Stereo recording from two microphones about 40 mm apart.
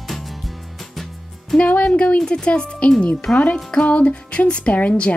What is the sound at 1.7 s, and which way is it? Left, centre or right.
Speech, left.